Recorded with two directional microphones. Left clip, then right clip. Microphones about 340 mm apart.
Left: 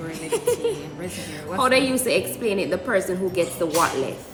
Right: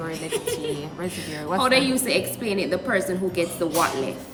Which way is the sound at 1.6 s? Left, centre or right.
Centre.